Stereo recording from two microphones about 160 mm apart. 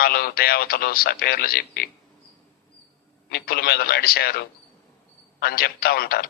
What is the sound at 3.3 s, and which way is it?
A man's voice, 80° left.